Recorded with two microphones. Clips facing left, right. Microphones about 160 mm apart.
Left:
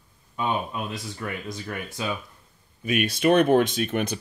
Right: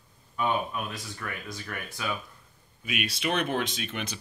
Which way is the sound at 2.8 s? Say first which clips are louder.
Left 9 dB; 45° left (ahead or behind).